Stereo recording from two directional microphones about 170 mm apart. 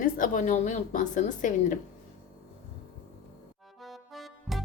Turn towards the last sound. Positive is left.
turn(degrees=0)  # may be behind; listen again after turning